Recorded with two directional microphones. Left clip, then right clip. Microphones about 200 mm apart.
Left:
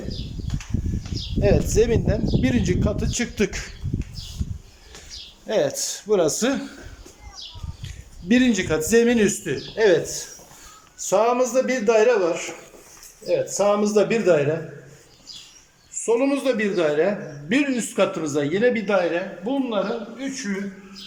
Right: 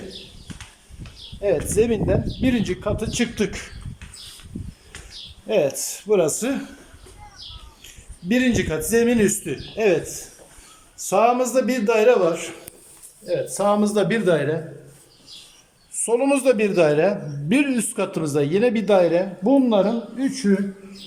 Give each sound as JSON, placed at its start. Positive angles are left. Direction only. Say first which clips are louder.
{"t": 1.4, "sound": "speech", "louder": "even", "side_deg": 0}
{"t": 5.5, "sound": "speech", "louder": "right 1 dB", "side_deg": -10}
{"t": 8.3, "sound": "speech", "louder": "left 1 dB", "side_deg": 0}
{"t": 16.0, "sound": "a man's voice", "louder": "right 2 dB", "side_deg": -10}
{"t": 19.5, "sound": "speech", "louder": "right 7 dB", "side_deg": -30}